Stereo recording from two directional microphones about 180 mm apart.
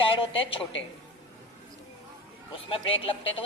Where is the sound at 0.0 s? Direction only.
30° left (ahead or behind).